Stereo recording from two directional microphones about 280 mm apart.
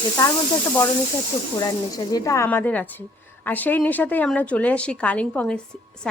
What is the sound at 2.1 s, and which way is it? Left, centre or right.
A woman's voice, centre.